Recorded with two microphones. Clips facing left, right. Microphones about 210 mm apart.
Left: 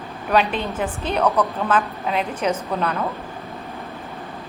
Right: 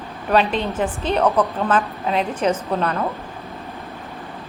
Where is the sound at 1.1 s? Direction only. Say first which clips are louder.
Right 2 dB; 30° right (ahead or behind).